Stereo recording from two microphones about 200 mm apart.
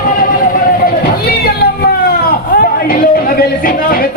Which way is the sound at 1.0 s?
50° left (ahead or behind).